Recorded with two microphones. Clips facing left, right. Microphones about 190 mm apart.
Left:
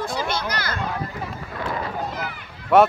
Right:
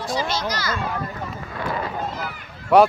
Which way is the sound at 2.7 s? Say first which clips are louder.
Right 1 dB; centre (ahead or behind).